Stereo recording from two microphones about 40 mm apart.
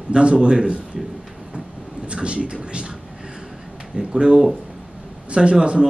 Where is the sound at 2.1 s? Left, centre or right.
Right.